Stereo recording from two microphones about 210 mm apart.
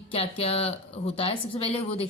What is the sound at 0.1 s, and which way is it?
Speech, 30° left (ahead or behind).